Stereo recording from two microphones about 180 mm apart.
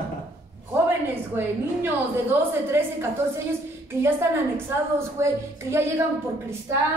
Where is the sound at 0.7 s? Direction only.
10° right (ahead or behind).